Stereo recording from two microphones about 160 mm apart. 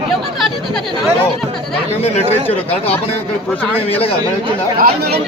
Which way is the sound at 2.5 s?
40° left (ahead or behind).